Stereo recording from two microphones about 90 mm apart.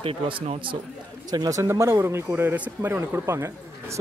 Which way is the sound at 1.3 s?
45° right (ahead or behind).